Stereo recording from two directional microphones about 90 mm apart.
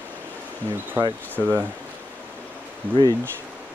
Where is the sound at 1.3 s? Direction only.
20° right (ahead or behind).